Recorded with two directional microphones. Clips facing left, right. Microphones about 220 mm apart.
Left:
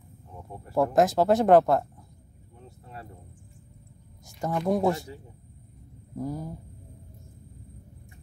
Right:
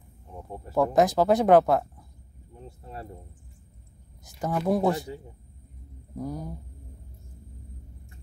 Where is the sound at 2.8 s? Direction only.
30° right (ahead or behind).